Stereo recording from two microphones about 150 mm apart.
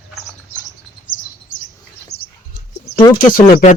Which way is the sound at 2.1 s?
90° left.